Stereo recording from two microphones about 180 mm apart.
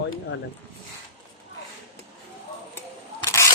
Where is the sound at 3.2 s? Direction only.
15° left (ahead or behind).